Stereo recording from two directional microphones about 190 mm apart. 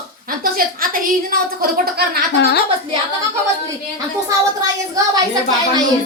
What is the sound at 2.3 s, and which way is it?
Speech, 60° left (ahead or behind).